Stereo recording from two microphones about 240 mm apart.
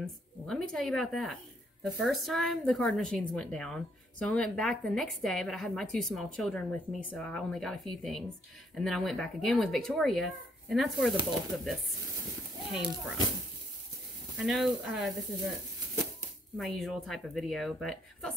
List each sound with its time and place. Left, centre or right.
0.0 s a woman's voice: centre
14.4 s a woman's voice: centre
16.5 s a woman's voice: centre